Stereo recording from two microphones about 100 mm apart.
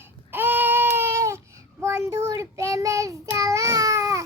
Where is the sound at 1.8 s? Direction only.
30° right (ahead or behind).